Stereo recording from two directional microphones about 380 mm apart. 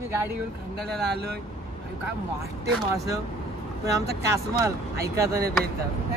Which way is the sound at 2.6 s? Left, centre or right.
Centre.